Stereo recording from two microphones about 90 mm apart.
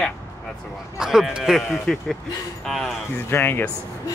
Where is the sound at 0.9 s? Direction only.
5° right (ahead or behind).